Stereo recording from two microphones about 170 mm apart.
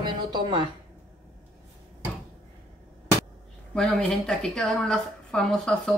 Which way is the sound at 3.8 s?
5° left (ahead or behind).